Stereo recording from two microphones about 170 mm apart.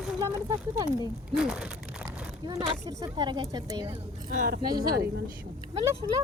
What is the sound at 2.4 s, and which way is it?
Speech, 25° right (ahead or behind).